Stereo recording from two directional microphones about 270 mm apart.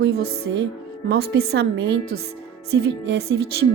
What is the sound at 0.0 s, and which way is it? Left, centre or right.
A woman's voice, right.